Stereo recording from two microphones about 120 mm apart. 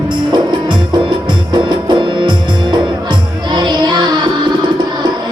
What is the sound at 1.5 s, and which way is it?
Music, 40° right (ahead or behind).